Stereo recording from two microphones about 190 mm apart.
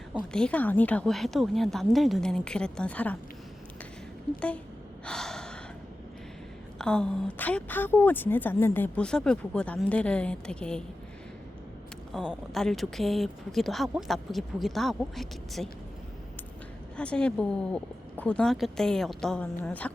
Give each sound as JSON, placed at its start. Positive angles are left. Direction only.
{"t": 0.3, "sound": "speech", "side_deg": 5}
{"t": 4.4, "sound": "a woman's voice", "side_deg": 5}
{"t": 5.0, "sound": "gasp", "side_deg": 5}
{"t": 6.7, "sound": "a woman's voice", "side_deg": 5}
{"t": 12.1, "sound": "speech", "side_deg": 0}
{"t": 17.0, "sound": "speech", "side_deg": 5}